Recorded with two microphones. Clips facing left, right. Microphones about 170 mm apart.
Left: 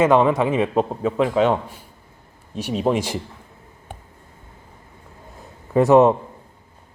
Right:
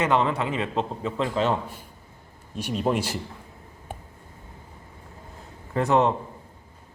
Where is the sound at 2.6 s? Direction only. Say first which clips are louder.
Left 4 dB; 10° left (ahead or behind).